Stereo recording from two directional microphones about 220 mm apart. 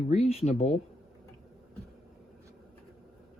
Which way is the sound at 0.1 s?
30° left (ahead or behind).